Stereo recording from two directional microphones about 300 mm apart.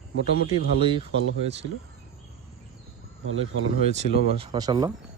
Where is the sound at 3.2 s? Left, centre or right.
Right.